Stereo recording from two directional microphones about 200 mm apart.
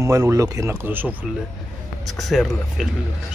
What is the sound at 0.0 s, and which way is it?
Speech, 15° right (ahead or behind).